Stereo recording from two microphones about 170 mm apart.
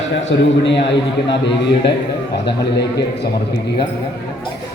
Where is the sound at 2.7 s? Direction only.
80° left.